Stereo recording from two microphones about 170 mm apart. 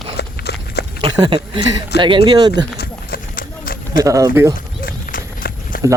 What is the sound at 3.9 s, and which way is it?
Speech, 20° right (ahead or behind).